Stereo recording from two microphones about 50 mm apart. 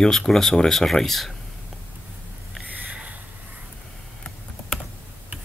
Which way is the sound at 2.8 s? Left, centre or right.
Right.